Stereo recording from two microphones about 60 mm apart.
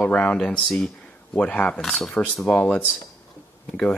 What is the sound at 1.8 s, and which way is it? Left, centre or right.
Speech, centre.